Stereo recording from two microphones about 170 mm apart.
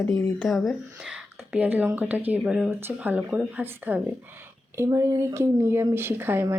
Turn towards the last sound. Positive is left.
turn(degrees=-15)  # may be behind; listen again after turning